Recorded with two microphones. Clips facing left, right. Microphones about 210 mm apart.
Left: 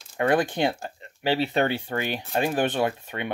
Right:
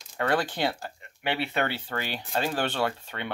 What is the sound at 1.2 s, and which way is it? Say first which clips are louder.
Speech: left 5 dB; 35° left (ahead or behind).